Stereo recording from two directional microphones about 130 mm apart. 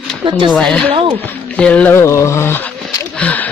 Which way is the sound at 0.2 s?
40° right (ahead or behind).